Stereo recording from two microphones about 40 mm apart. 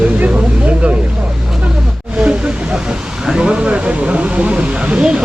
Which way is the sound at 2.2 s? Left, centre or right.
Right.